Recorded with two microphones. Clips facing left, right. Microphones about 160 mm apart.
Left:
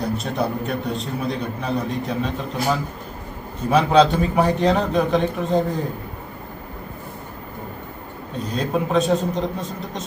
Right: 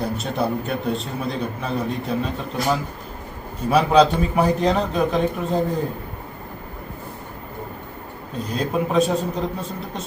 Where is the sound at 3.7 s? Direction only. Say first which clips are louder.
Even; 5° right (ahead or behind).